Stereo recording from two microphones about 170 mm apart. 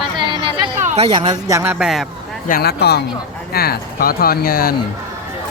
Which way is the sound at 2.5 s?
70° left (ahead or behind).